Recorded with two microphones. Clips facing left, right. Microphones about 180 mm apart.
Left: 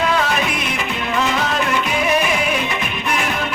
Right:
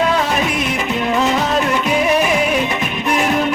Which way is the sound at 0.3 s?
40° right (ahead or behind).